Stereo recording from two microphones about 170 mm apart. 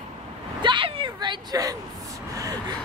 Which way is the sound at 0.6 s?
30° right (ahead or behind).